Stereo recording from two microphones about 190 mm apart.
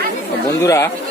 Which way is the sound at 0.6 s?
15° left (ahead or behind).